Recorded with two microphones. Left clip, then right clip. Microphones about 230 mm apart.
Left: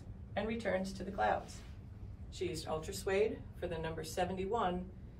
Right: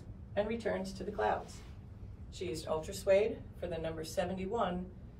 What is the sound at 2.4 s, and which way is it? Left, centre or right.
Speech, centre.